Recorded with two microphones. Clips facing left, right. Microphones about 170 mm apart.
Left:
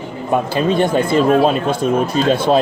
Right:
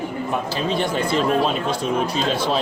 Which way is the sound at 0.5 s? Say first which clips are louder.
Left 8 dB; 50° left (ahead or behind).